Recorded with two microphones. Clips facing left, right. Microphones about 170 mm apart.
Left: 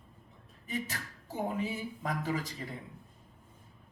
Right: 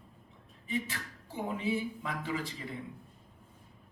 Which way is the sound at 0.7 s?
40° left (ahead or behind).